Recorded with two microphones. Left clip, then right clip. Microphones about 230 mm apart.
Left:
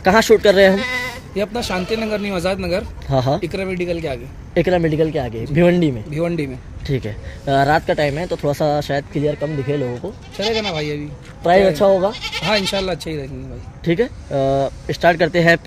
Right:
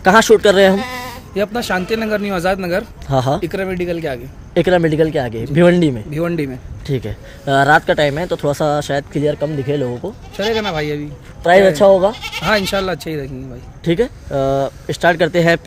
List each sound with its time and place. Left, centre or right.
0.0 s speech: centre
0.7 s speech: right
3.1 s speech: centre
3.3 s speech: right
4.6 s speech: centre
6.0 s speech: right
6.9 s speech: centre
10.3 s speech: right
11.7 s speech: centre
12.1 s speech: right
13.8 s speech: centre